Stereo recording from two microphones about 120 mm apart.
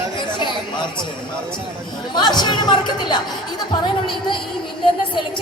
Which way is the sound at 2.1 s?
35° left (ahead or behind).